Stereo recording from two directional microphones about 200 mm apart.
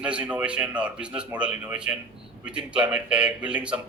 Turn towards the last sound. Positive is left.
turn(degrees=-5)  # may be behind; listen again after turning